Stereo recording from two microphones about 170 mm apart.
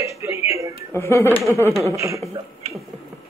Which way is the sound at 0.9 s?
15° left (ahead or behind).